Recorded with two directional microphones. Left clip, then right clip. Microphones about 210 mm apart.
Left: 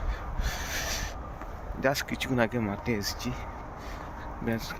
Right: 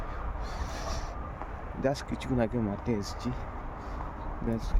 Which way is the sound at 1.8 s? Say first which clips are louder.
Left 3 dB; 5° right (ahead or behind).